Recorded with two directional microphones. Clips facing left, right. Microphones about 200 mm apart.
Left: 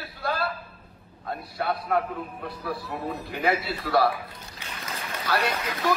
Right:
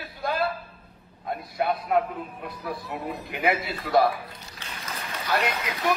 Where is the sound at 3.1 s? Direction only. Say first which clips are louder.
Even; 15° right (ahead or behind).